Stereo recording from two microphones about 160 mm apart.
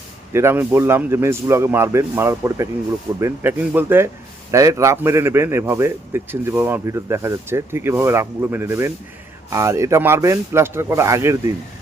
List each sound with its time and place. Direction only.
0.3 s a man's voice: 15° right (ahead or behind)